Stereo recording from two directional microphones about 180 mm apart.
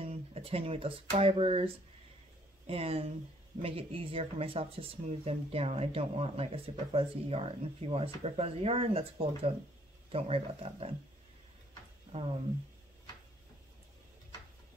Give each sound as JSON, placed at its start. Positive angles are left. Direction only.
{"t": 0.0, "sound": "speech", "side_deg": -35}
{"t": 12.1, "sound": "speech", "side_deg": -35}